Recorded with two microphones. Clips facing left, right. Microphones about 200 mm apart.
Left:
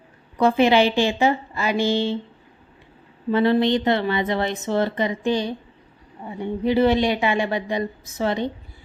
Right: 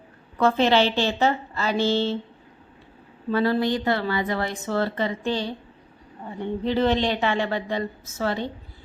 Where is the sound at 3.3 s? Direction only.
20° left (ahead or behind).